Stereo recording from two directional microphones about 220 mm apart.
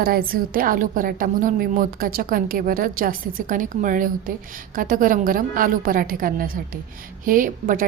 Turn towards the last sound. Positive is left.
turn(degrees=-40)  # may be behind; listen again after turning